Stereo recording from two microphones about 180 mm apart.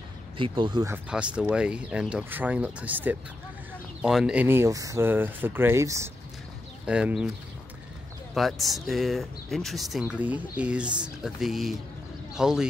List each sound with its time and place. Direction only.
0.4 s speech: 25° right (ahead or behind)
0.9 s speech: 10° right (ahead or behind)
6.9 s speech: 5° right (ahead or behind)
8.4 s speech: centre (ahead or behind)